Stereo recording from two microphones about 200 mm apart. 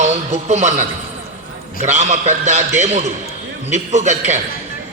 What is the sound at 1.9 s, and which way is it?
A man's voice, 35° right (ahead or behind).